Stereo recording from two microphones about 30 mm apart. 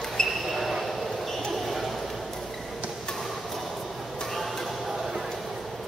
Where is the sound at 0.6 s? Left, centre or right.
Centre.